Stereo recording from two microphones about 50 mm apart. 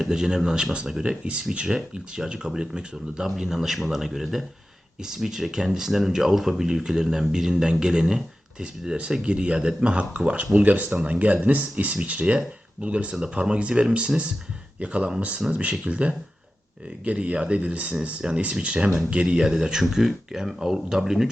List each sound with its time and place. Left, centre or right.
0.0 s speech: centre